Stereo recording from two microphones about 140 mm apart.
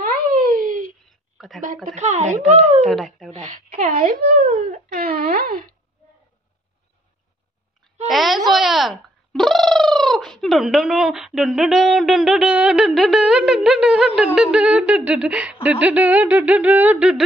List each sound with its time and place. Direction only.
0.0 s a sound: 90° right; by 0.9 s 75° right (ahead or behind)
1.9 s speech: 55° right (ahead or behind)
2.9 s speech: centre (ahead or behind)
3.3 s a child's voice: 60° right (ahead or behind); by 5.8 s 90° right
8.1 s speech: centre (ahead or behind)